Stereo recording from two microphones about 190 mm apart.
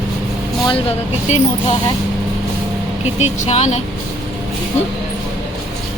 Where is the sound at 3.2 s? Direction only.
35° left (ahead or behind).